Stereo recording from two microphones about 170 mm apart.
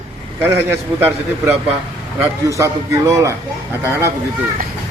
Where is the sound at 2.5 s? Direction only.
20° right (ahead or behind).